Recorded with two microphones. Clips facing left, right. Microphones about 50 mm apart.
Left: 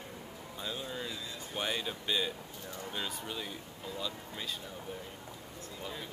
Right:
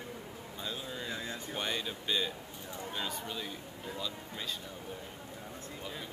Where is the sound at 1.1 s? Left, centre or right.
Right.